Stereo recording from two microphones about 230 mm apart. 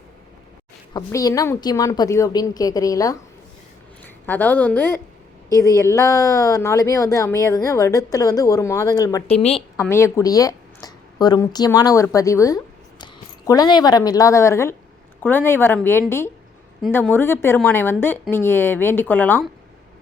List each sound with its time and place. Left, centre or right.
0.9 s speech: centre
4.3 s speech: centre
9.3 s a woman's voice: left
9.8 s a woman's voice: centre